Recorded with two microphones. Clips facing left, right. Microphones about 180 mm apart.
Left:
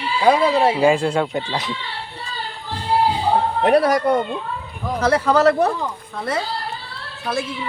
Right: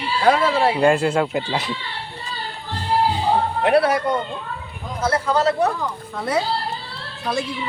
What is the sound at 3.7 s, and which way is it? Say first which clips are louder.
Speech: left 1 dB; 40° left (ahead or behind).